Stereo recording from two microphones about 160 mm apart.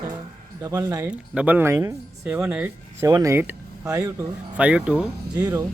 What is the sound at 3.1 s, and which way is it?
Speech, 20° right (ahead or behind).